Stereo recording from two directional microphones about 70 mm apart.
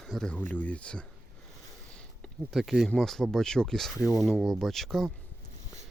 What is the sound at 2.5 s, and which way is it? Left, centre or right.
Speech, centre.